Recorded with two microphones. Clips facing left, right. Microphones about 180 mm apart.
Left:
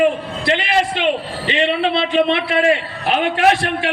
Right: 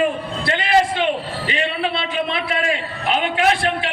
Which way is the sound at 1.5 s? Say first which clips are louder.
Left 6 dB; 25° left (ahead or behind).